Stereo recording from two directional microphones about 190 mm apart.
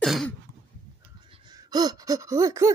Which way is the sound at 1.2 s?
25° right (ahead or behind).